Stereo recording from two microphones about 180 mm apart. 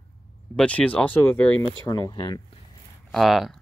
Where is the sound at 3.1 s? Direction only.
Centre (ahead or behind).